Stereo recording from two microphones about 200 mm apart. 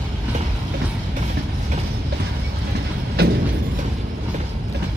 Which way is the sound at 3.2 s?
50° right (ahead or behind).